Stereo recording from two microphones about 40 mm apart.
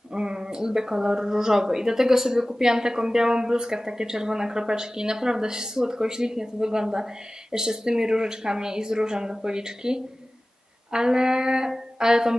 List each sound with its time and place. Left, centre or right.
0.1 s speech: centre